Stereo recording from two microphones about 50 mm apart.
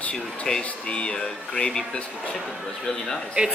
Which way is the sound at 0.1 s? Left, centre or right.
Centre.